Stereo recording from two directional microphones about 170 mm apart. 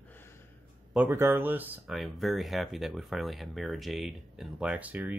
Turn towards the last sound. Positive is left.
turn(degrees=-10)  # may be behind; listen again after turning